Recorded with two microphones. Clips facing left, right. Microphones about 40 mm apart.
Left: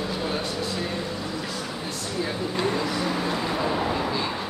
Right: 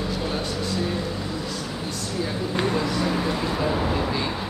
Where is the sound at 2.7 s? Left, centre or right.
Centre.